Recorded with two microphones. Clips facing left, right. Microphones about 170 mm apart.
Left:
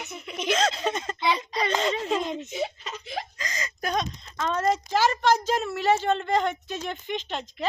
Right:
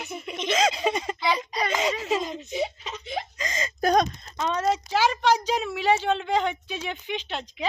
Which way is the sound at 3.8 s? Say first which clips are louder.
Right 7 dB; 45° right (ahead or behind).